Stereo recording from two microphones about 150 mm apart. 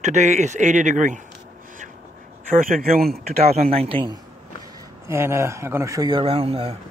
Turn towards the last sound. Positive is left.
turn(degrees=-40)  # may be behind; listen again after turning